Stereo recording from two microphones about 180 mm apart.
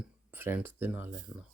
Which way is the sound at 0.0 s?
10° right (ahead or behind).